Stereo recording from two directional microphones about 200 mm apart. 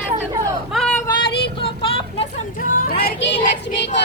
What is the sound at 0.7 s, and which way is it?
Vehicle, 5° left (ahead or behind).